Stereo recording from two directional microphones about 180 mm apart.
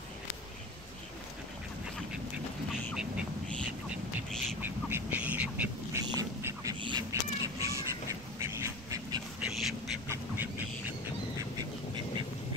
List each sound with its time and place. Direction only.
3.0 s a sound: centre (ahead or behind)
4.6 s duck: 10° right (ahead or behind)
6.1 s crow: 20° right (ahead or behind)
9.4 s duck: centre (ahead or behind)
10.0 s duck: 15° right (ahead or behind)